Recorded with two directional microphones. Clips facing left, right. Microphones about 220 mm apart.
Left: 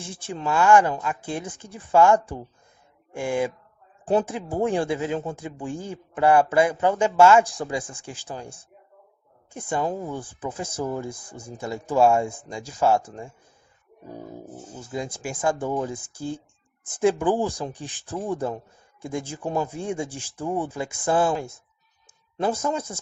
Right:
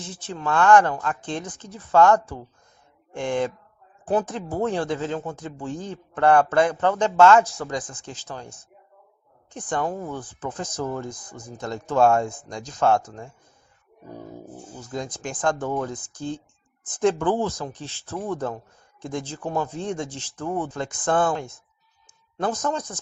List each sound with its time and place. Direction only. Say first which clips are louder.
0.0 s speech: even; 10° left (ahead or behind)
4.0 s speech: left 1 dB; 30° left (ahead or behind)
4.3 s speech: left 1 dB; 10° left (ahead or behind)
9.5 s speech: left 1 dB; 10° left (ahead or behind)
11.3 s speech: left 1 dB; 30° left (ahead or behind)
11.6 s speech: even; 10° left (ahead or behind)
14.8 s speech: even; 10° left (ahead or behind)
22.5 s speech: even; 10° left (ahead or behind)